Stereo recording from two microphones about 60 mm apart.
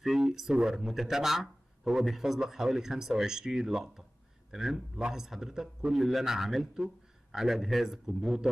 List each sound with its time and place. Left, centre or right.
0.0 s a man's voice: centre